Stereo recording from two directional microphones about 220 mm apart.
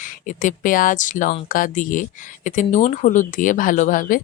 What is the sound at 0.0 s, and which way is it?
Speech, 35° left (ahead or behind).